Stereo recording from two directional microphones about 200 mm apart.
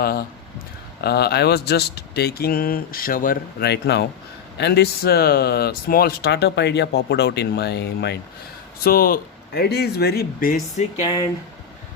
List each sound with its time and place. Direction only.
0.0 s speech: 50° left (ahead or behind)